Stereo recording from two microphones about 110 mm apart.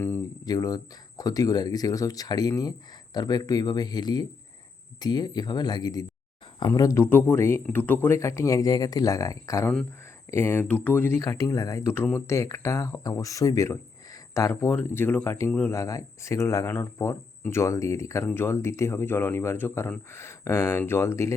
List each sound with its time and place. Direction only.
0.4 s speech: 35° left (ahead or behind); by 11.2 s 20° left (ahead or behind)
11.2 s speech: 30° left (ahead or behind)
14.7 s speech: 20° left (ahead or behind)